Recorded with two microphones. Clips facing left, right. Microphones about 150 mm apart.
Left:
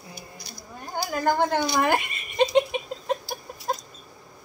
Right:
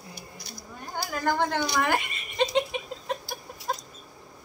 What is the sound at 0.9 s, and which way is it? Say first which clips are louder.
Speech: left 3 dB; 15° left (ahead or behind).